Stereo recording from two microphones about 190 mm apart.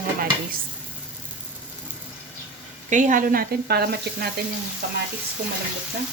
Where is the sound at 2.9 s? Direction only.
40° right (ahead or behind).